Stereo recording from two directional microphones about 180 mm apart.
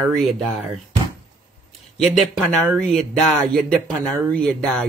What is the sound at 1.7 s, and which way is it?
Speech, centre (ahead or behind).